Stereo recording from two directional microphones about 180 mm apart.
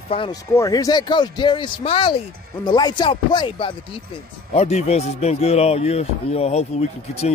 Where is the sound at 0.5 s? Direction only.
20° left (ahead or behind).